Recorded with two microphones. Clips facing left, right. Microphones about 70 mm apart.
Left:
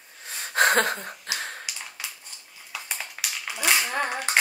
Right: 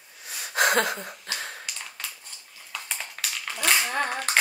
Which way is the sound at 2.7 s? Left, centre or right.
Centre.